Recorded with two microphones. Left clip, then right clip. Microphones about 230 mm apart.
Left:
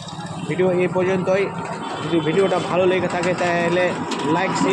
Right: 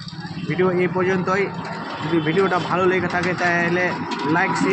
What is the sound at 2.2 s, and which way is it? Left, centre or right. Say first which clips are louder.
Speech: left 1 dB; right.